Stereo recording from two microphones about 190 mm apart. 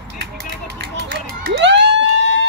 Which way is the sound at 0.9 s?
60° right (ahead or behind).